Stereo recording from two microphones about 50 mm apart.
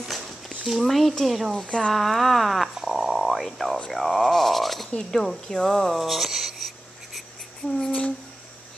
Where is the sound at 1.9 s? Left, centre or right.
Centre.